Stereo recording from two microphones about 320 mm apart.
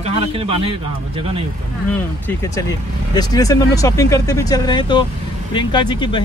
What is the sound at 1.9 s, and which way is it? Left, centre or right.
Speech, centre.